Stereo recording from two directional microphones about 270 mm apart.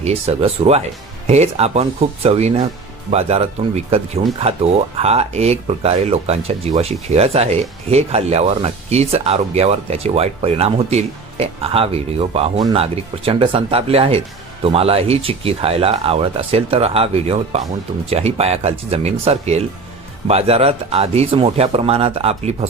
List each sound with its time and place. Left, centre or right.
0.0 s speech: right